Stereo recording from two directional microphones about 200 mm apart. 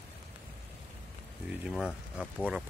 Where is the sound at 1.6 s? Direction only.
Centre (ahead or behind).